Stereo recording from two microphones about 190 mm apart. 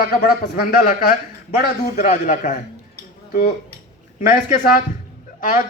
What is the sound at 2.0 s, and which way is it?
Speech, 40° left (ahead or behind).